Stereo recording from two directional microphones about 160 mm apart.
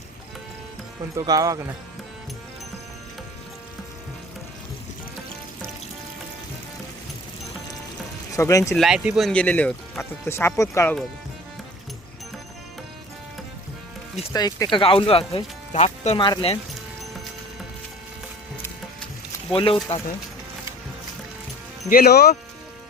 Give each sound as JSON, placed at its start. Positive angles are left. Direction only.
{"t": 1.1, "sound": "speech", "side_deg": -25}
{"t": 8.4, "sound": "speech", "side_deg": 20}
{"t": 8.7, "sound": "speech", "side_deg": 0}
{"t": 14.3, "sound": "speech", "side_deg": 25}
{"t": 16.2, "sound": "speech", "side_deg": 25}
{"t": 19.5, "sound": "speech", "side_deg": 35}
{"t": 21.8, "sound": "speech", "side_deg": 70}